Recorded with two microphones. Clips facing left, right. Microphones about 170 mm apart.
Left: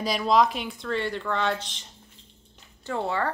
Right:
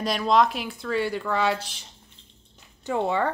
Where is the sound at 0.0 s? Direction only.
Centre (ahead or behind).